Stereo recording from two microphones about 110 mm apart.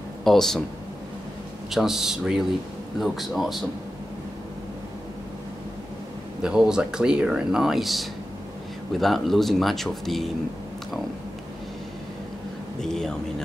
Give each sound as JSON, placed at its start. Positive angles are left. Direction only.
{"t": 0.2, "sound": "speech", "side_deg": 5}
{"t": 1.7, "sound": "speech", "side_deg": -5}
{"t": 6.4, "sound": "speech", "side_deg": -5}
{"t": 12.8, "sound": "speech", "side_deg": 5}